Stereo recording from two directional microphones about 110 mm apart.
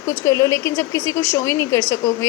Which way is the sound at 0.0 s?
25° left (ahead or behind).